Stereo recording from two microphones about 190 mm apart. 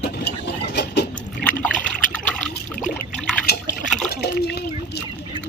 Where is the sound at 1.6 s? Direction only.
5° left (ahead or behind).